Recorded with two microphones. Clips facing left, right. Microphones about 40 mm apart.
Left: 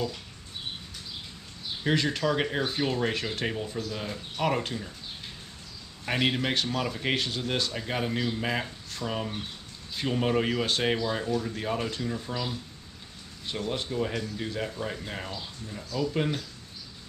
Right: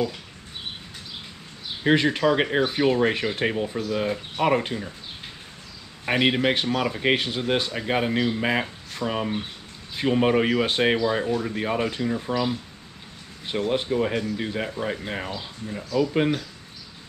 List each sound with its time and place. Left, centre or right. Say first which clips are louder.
1.8 s speech: right 7 dB; right
6.0 s speech: right 6 dB; right